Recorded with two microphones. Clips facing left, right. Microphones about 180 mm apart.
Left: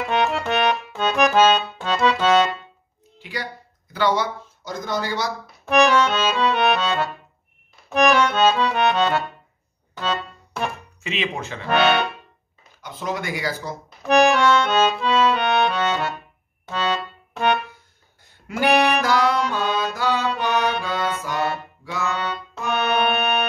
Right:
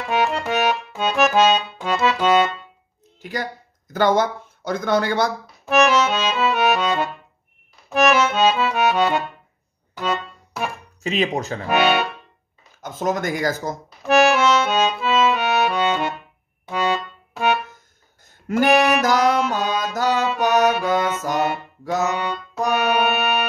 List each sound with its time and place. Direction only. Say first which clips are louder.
0.1 s accordion: right 1 dB; 5° right (ahead or behind)
3.2 s speech: right 4 dB; 45° right (ahead or behind)
5.7 s accordion: even; 5° right (ahead or behind)
9.9 s music: right 2 dB; 10° right (ahead or behind)
11.0 s speech: right 6 dB; 40° right (ahead or behind)
11.6 s speech: even; 10° right (ahead or behind)
12.8 s speech: right 5 dB; 45° right (ahead or behind)
14.0 s accordion: even; centre (ahead or behind)
18.7 s music: right 1 dB; centre (ahead or behind)
18.9 s music: right 2 dB; 45° right (ahead or behind)
22.0 s music: right 3 dB; 15° right (ahead or behind)